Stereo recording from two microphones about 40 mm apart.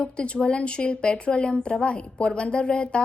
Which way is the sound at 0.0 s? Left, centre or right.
Left.